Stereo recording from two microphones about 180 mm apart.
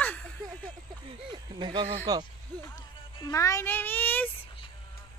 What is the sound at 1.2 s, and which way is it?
Speech, 25° right (ahead or behind).